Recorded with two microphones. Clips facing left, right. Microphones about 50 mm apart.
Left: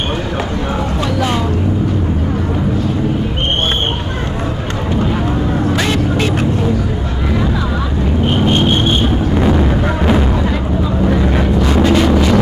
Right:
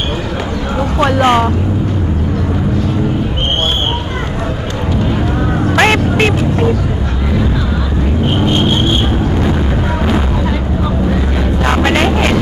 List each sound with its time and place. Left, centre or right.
0.9 s vehicle: right
5.7 s music: right
10.0 s music: centre
11.6 s vehicle: right